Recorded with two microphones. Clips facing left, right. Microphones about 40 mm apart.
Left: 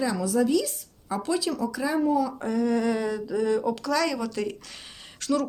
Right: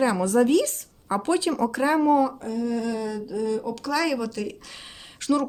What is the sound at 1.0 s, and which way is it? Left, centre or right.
Speech, right.